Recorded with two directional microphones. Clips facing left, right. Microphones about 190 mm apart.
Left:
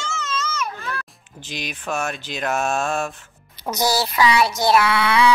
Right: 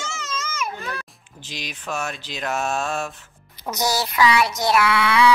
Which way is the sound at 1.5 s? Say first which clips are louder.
Left 3 dB; 55° left (ahead or behind).